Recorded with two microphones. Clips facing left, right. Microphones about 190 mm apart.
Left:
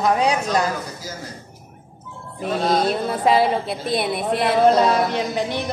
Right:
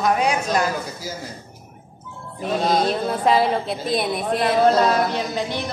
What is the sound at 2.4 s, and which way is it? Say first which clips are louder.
Speech: even; centre (ahead or behind).